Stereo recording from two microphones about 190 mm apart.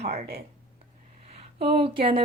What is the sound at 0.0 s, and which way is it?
A woman's voice, 35° right (ahead or behind).